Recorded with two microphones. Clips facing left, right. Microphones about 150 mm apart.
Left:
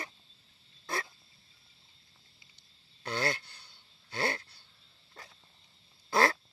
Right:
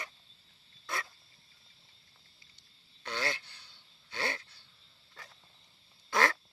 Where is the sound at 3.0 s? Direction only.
40° left (ahead or behind).